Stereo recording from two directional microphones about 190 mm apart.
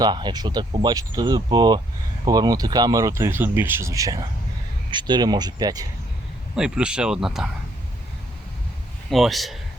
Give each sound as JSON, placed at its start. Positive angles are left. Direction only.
{"t": 0.0, "sound": "speech", "side_deg": -25}
{"t": 6.6, "sound": "speech", "side_deg": -5}
{"t": 9.0, "sound": "speech", "side_deg": 0}